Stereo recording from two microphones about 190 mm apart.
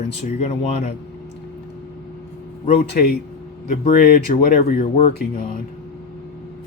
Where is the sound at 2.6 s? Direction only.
50° left (ahead or behind).